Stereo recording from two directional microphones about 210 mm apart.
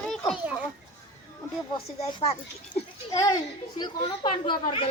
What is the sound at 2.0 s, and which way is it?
Speech, 30° left (ahead or behind).